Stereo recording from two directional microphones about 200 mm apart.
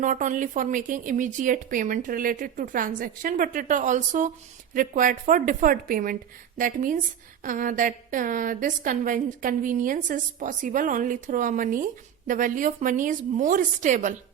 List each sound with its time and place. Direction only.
0.0 s a woman's voice: 40° right (ahead or behind)